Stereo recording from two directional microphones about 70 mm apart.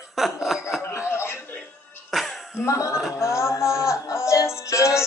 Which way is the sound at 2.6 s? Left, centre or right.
Left.